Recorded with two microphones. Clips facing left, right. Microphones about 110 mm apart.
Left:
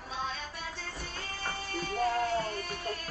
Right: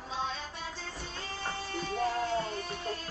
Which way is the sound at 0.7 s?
25° right (ahead or behind).